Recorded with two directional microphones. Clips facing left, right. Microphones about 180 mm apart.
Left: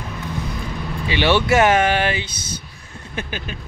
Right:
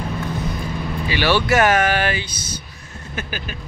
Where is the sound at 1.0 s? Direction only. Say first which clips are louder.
Left 2 dB; 25° left (ahead or behind).